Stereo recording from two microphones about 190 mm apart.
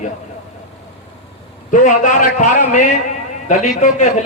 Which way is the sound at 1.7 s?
45° left (ahead or behind).